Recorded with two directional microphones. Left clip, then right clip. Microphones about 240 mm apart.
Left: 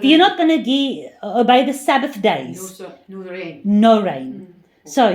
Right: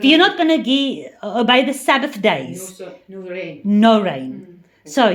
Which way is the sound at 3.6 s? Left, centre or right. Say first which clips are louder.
Left 1 dB; centre.